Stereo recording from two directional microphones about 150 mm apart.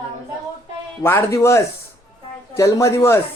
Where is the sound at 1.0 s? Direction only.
15° left (ahead or behind).